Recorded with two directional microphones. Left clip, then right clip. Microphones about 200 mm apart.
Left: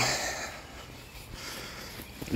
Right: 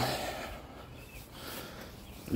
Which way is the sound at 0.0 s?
20° right (ahead or behind).